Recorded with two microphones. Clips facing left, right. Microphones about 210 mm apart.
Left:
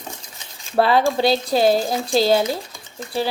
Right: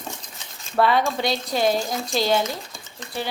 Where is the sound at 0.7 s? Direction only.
30° left (ahead or behind).